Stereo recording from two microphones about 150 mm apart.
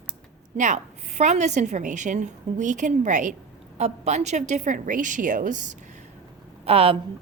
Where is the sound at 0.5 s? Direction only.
55° right (ahead or behind).